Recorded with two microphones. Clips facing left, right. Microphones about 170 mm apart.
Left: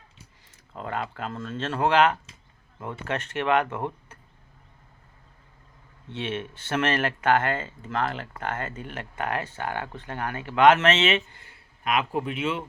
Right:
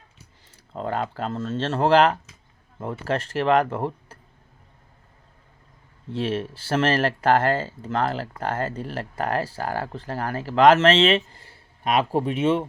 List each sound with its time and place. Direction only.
0.5 s speech: 35° right (ahead or behind)
6.1 s speech: 35° right (ahead or behind)